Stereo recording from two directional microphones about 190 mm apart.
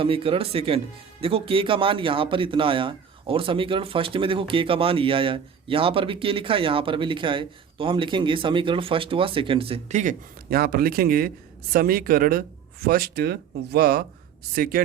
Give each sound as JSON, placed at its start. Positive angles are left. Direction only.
{"t": 0.0, "sound": "speech", "side_deg": -30}